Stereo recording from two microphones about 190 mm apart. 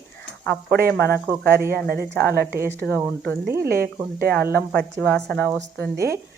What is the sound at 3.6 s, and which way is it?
Speech, 55° right (ahead or behind).